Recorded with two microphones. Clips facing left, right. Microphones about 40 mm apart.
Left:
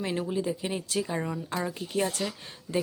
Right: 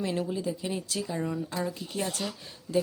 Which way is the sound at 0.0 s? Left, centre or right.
Left.